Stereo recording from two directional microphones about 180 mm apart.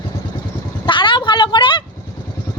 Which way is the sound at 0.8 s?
25° left (ahead or behind).